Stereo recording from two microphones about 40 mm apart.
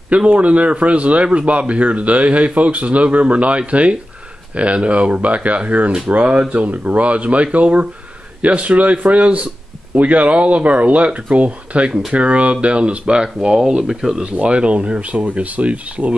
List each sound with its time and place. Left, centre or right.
0.3 s speech: right; by 14.2 s centre
14.3 s speech: right